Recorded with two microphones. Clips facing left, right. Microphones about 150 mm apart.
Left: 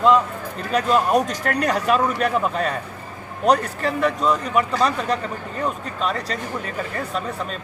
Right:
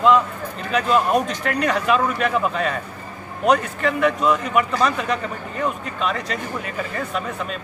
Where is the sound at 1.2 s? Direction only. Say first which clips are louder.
Even; 40° left (ahead or behind).